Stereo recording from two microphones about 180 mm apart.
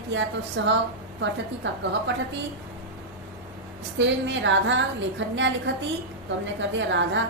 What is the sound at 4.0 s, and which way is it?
A woman's voice, 85° right.